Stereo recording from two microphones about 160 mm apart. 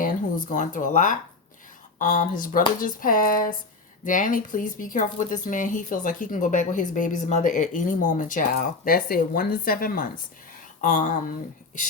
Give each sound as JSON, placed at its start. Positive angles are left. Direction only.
{"t": 0.0, "sound": "speech", "side_deg": 55}